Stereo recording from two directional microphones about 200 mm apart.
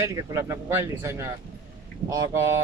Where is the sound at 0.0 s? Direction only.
15° right (ahead or behind).